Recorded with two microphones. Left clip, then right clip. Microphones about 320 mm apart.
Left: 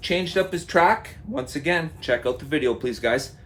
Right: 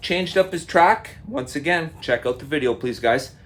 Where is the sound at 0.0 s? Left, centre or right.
Right.